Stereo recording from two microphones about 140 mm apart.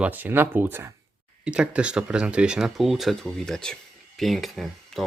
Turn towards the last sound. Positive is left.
turn(degrees=0)  # may be behind; listen again after turning